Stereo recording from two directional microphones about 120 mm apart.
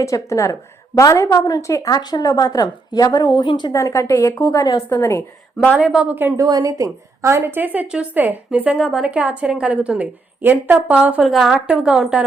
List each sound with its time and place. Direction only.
0.0 s a woman's voice: 25° left (ahead or behind)
3.7 s a woman's voice: 25° left (ahead or behind)
5.7 s a woman's voice: 10° right (ahead or behind)
6.4 s a woman's voice: 30° right (ahead or behind); by 11.2 s 15° right (ahead or behind)
11.2 s a woman's voice: 5° right (ahead or behind)